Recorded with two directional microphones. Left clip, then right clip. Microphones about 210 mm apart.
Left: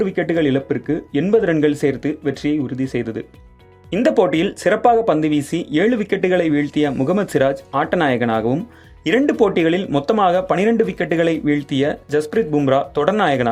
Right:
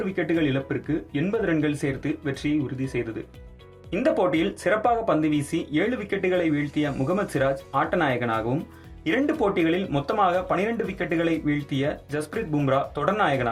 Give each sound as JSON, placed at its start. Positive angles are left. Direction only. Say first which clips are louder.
{"t": 0.0, "sound": "speech", "louder": "left 7 dB", "side_deg": 45}